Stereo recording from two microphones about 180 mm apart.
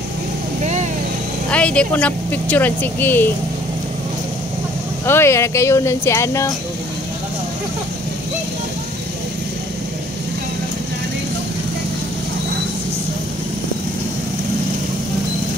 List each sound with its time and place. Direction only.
1.5 s speech: 5° left (ahead or behind)
5.0 s speech: 15° left (ahead or behind)